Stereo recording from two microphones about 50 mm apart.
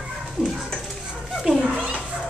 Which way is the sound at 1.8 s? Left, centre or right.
Centre.